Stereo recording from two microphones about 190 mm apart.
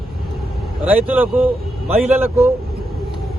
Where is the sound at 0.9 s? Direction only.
10° right (ahead or behind).